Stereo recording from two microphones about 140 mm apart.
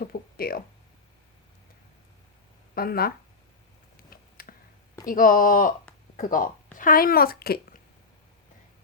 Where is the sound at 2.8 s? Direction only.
90° left.